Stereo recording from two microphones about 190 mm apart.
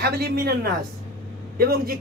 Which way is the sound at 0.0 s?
55° right (ahead or behind).